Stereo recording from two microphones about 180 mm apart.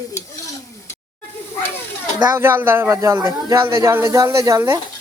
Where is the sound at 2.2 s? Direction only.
15° right (ahead or behind).